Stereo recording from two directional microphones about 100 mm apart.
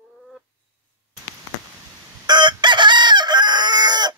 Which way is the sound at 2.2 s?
50° right (ahead or behind).